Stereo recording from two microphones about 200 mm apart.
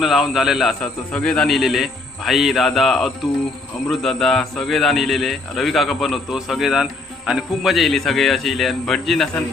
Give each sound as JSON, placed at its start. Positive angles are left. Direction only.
{"t": 0.0, "sound": "a man's voice", "side_deg": 0}